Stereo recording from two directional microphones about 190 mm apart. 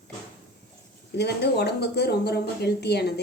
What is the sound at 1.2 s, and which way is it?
A woman's voice, 60° left (ahead or behind).